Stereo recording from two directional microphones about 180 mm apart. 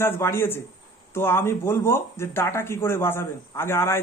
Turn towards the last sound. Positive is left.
turn(degrees=15)  # may be behind; listen again after turning